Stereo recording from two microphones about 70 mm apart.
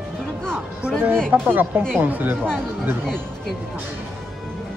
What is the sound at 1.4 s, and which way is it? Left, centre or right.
Speech, right.